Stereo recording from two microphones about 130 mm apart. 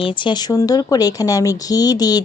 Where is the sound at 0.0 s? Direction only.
35° left (ahead or behind).